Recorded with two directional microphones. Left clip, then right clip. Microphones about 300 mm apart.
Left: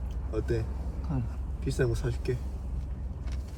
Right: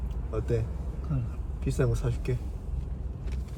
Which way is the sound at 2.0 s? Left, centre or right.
Centre.